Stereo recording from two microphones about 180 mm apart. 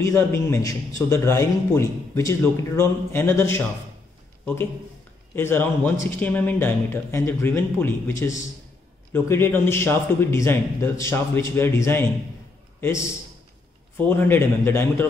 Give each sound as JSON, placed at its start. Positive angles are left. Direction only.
{"t": 0.0, "sound": "a man's voice", "side_deg": 15}
{"t": 5.3, "sound": "a man's voice", "side_deg": 10}
{"t": 13.9, "sound": "a man's voice", "side_deg": 10}